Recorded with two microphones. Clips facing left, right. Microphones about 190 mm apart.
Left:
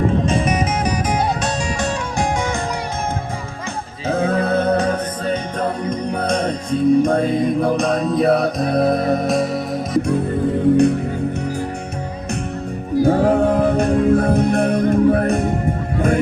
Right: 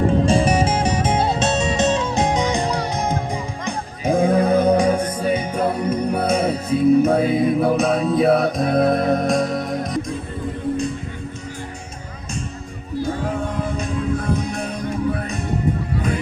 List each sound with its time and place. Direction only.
0.3 s music: 30° right (ahead or behind)
4.0 s music: 15° right (ahead or behind); by 10.0 s centre (ahead or behind)
13.1 s music: 65° left (ahead or behind)
16.0 s honk: 50° left (ahead or behind)